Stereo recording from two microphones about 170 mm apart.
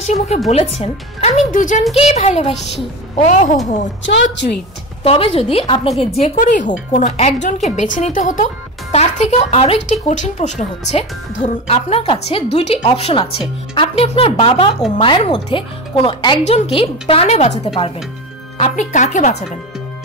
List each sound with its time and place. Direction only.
0.0 s speech: 40° left (ahead or behind)
2.0 s speech: 40° left (ahead or behind)
4.0 s a woman's voice: 90° left
5.0 s speech: 35° left (ahead or behind)
18.6 s speech: 45° left (ahead or behind)